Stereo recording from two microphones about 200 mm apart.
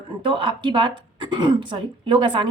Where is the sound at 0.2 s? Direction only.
25° right (ahead or behind).